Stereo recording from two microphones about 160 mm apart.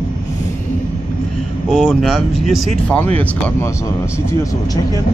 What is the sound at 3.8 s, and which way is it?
Speech, 20° left (ahead or behind).